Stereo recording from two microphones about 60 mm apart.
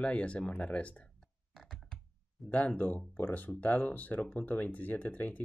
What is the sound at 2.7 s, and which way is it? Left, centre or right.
Speech, left.